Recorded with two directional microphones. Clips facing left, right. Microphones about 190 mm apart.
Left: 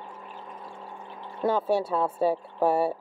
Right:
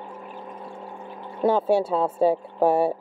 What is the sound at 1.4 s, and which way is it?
Speech, 25° right (ahead or behind).